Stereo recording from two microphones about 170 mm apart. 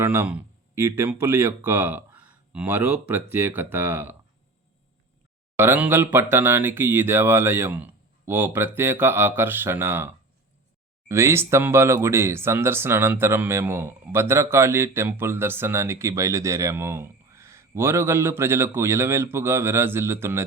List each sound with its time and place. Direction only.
0.0 s speech: 15° right (ahead or behind)
5.5 s speech: 10° right (ahead or behind)